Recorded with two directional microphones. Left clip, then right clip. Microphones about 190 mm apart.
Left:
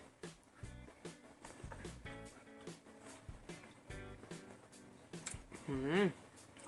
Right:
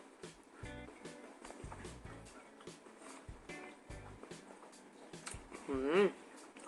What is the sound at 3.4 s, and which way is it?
Music, centre (ahead or behind).